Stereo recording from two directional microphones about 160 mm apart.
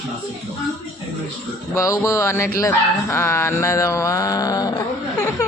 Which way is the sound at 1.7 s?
20° left (ahead or behind).